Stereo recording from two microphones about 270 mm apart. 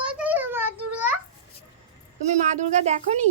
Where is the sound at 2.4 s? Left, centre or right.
Right.